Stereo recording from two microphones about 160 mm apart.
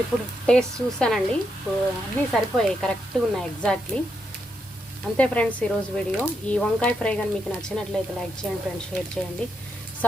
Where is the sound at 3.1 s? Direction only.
5° left (ahead or behind).